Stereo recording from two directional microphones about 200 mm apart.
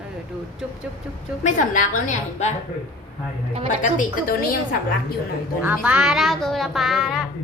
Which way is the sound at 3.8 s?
40° left (ahead or behind).